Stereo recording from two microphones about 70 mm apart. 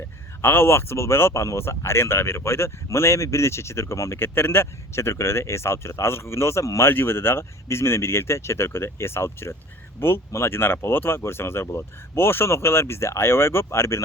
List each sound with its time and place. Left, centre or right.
0.4 s speech: left